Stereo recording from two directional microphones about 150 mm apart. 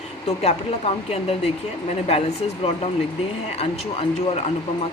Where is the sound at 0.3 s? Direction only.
45° left (ahead or behind).